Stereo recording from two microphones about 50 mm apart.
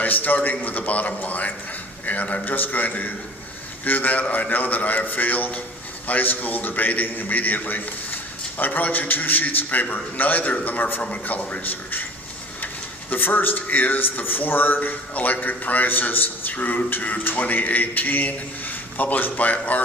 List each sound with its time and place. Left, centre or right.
0.0 s a man's voice: left
11.0 s a man's voice: left